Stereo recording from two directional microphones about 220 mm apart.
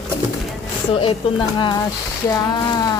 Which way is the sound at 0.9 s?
20° left (ahead or behind).